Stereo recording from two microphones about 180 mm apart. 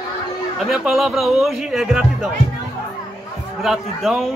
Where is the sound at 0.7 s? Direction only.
Centre (ahead or behind).